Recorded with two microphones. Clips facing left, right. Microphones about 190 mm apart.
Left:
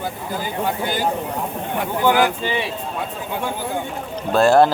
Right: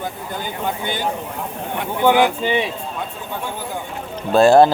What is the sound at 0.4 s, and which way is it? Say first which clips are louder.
Speech: left 2 dB; 5° left (ahead or behind).